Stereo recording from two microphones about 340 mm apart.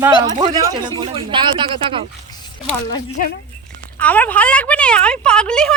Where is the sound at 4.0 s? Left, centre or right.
Centre.